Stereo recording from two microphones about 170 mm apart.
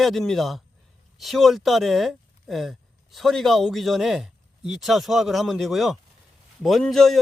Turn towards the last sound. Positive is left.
turn(degrees=0)  # may be behind; listen again after turning